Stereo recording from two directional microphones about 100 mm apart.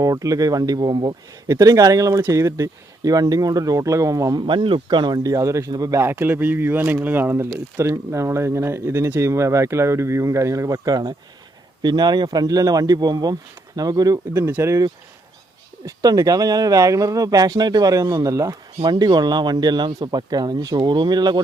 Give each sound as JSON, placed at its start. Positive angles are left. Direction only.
{"t": 0.0, "sound": "speech", "side_deg": -35}
{"t": 4.4, "sound": "speech", "side_deg": -60}
{"t": 6.0, "sound": "speech", "side_deg": -25}
{"t": 14.4, "sound": "speech", "side_deg": -25}
{"t": 15.9, "sound": "speech", "side_deg": -35}
{"t": 18.9, "sound": "speech", "side_deg": -45}